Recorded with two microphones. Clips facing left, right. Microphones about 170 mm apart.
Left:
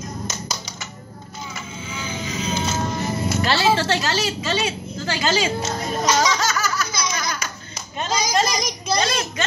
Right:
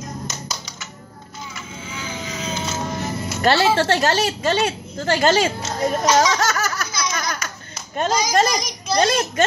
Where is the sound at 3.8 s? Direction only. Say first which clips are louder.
Right 4 dB; 50° right (ahead or behind).